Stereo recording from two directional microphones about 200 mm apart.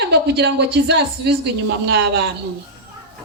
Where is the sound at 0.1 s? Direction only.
55° right (ahead or behind).